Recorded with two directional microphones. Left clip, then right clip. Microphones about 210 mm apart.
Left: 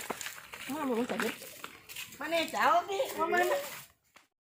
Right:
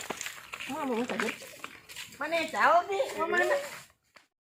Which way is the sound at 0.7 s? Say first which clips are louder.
Right 1 dB; 15° left (ahead or behind).